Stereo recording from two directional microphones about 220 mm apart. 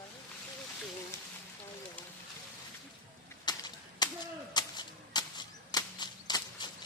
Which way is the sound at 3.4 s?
20° left (ahead or behind).